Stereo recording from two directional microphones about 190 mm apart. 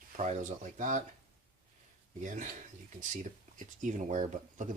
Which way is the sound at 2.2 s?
40° right (ahead or behind).